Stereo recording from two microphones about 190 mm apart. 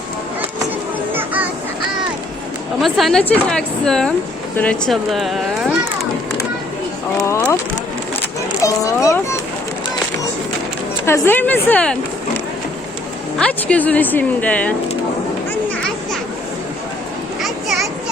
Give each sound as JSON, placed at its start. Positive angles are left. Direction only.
{"t": 1.1, "sound": "children playing", "side_deg": -10}
{"t": 2.8, "sound": "a woman's voice", "side_deg": 0}
{"t": 7.2, "sound": "a sound", "side_deg": 15}
{"t": 8.6, "sound": "a child's voice", "side_deg": 15}
{"t": 11.0, "sound": "a woman's voice", "side_deg": 10}
{"t": 13.4, "sound": "a woman's voice", "side_deg": 5}